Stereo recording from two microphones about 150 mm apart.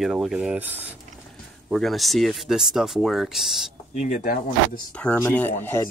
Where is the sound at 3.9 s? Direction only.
50° left (ahead or behind).